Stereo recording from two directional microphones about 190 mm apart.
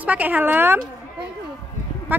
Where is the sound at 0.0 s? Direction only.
10° right (ahead or behind).